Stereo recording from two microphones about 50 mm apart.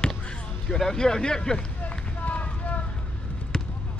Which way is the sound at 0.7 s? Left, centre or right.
Centre.